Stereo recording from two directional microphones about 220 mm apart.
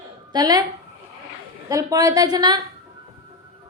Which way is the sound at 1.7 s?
15° right (ahead or behind).